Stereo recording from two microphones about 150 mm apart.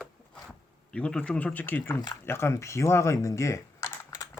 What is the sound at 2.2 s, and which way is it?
Typing, 15° left (ahead or behind).